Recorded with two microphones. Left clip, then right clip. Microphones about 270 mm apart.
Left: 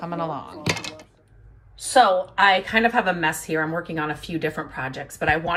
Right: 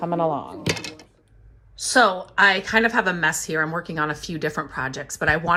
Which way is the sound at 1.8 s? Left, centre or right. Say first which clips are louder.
Left 1 dB; centre.